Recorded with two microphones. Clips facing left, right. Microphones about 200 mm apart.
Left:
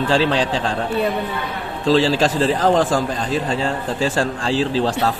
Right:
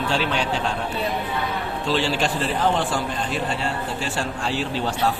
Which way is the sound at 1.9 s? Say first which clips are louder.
Left 7 dB; 90° left.